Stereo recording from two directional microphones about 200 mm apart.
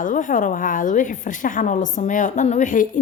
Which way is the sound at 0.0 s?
40° left (ahead or behind).